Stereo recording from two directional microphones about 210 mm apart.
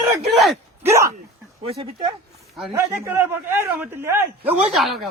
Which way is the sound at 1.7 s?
25° right (ahead or behind).